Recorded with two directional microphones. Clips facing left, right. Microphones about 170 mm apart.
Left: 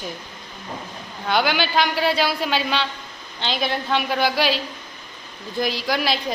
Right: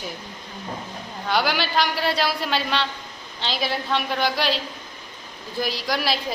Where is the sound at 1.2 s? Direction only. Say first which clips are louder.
Left 2 dB; centre (ahead or behind).